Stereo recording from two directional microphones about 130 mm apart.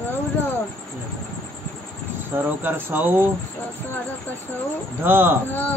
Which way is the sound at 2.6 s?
15° right (ahead or behind).